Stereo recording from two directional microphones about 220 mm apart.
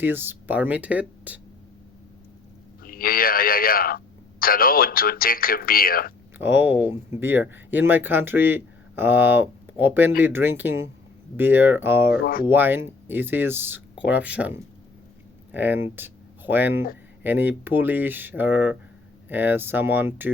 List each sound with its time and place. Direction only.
0.0 s speech: 10° right (ahead or behind)
2.8 s speech: 40° left (ahead or behind)
6.4 s speech: 10° right (ahead or behind)
12.2 s speech: 40° left (ahead or behind)
12.5 s speech: 10° right (ahead or behind)